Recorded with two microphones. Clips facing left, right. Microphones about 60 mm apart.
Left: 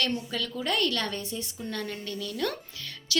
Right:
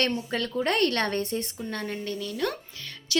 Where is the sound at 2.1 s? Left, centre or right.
Right.